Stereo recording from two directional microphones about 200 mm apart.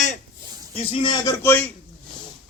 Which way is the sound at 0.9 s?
25° left (ahead or behind).